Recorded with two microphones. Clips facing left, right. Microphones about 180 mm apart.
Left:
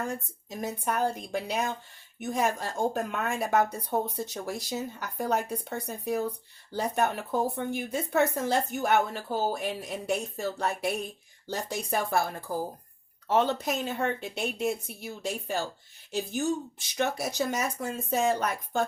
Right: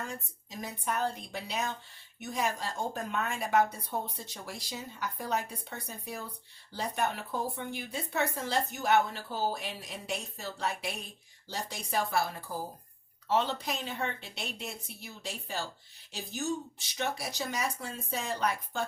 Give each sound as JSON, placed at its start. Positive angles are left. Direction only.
{"t": 0.0, "sound": "speech", "side_deg": 50}
{"t": 13.2, "sound": "speech", "side_deg": 50}